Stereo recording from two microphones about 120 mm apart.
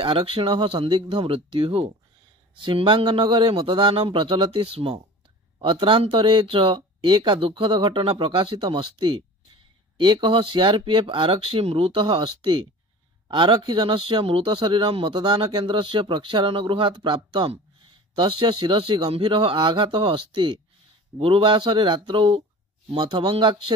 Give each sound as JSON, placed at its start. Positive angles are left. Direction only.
{"t": 0.0, "sound": "speech", "side_deg": -45}